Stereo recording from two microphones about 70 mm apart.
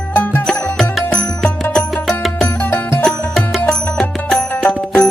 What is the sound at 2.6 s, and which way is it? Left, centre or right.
Music, left.